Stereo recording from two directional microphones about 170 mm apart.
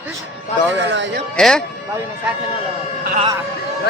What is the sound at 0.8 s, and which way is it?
Speech, 90° right.